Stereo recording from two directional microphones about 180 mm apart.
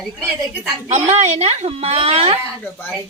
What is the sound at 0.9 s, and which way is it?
A woman's voice, 40° right (ahead or behind).